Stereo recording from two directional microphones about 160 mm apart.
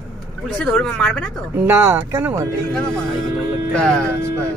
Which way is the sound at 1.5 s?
15° right (ahead or behind).